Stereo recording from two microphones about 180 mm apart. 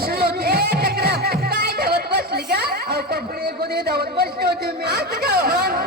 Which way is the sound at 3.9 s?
60° right (ahead or behind).